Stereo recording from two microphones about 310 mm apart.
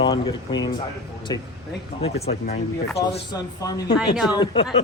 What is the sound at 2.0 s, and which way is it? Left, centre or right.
Speech, centre.